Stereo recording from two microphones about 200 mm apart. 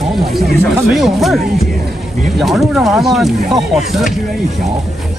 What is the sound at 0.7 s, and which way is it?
Speech, centre (ahead or behind).